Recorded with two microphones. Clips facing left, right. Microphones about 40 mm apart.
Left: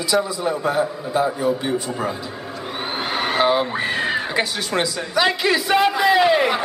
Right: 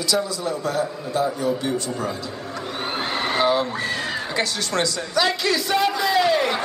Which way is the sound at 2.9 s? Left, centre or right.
Centre.